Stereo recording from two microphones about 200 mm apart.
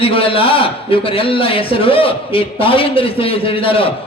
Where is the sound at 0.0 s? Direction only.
25° left (ahead or behind).